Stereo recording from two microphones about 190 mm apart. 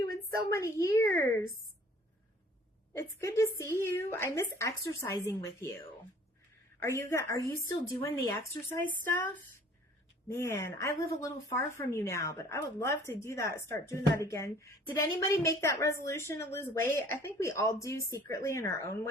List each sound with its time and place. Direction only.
0.5 s speech: 15° left (ahead or behind)
2.9 s speech: 15° left (ahead or behind)
6.8 s speech: 15° left (ahead or behind)